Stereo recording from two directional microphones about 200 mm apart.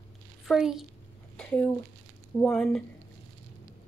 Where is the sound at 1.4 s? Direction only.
5° left (ahead or behind).